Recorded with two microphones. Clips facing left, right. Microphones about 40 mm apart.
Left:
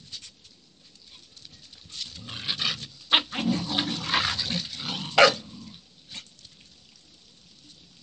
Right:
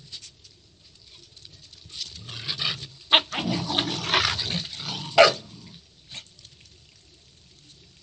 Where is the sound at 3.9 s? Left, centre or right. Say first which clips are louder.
Right 3 dB; right.